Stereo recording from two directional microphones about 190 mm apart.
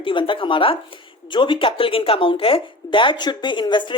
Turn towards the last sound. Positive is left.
turn(degrees=25)  # may be behind; listen again after turning